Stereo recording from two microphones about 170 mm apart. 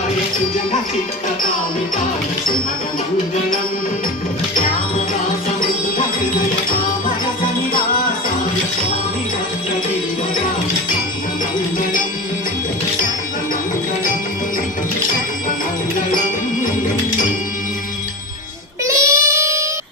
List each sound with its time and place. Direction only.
18.9 s child singing: 20° right (ahead or behind)